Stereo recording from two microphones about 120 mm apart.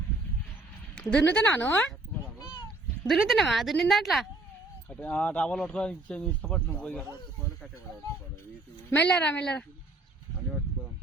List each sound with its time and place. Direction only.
0.9 s speech: 15° left (ahead or behind)
3.1 s speech: centre (ahead or behind)
4.9 s speech: 10° left (ahead or behind)
8.9 s speech: 10° left (ahead or behind)